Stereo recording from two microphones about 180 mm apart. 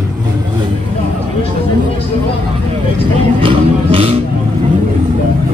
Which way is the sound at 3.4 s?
30° right (ahead or behind).